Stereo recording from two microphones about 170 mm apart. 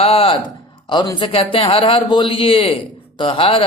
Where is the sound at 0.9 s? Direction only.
25° left (ahead or behind).